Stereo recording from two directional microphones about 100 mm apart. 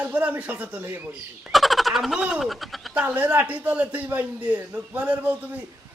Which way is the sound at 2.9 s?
15° right (ahead or behind).